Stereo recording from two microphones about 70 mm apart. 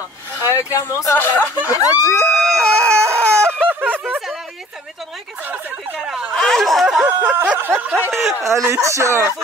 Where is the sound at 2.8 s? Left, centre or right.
Right.